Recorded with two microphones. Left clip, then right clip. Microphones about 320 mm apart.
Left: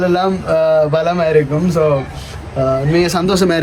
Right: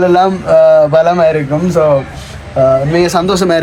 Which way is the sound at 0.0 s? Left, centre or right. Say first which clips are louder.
Right 6 dB; centre.